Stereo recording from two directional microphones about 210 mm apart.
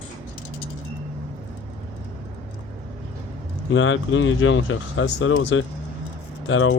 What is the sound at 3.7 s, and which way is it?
Speech, 70° left (ahead or behind).